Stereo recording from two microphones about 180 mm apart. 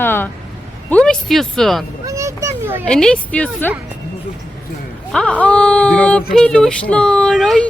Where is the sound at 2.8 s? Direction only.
5° left (ahead or behind).